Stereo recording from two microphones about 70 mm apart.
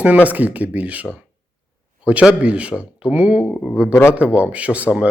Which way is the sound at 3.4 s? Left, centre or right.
Left.